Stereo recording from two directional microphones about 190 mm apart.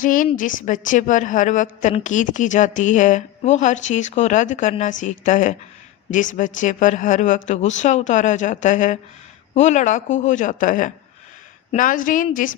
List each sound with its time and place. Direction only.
0.0 s a woman's voice: 45° left (ahead or behind)